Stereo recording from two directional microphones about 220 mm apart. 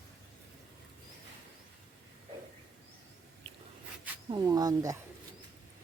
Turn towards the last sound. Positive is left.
turn(degrees=-15)  # may be behind; listen again after turning